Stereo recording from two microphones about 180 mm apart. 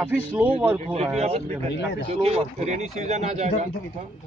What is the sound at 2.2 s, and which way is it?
Speech, 35° right (ahead or behind).